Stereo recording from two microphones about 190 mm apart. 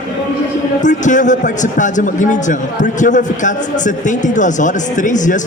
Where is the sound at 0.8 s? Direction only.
40° left (ahead or behind).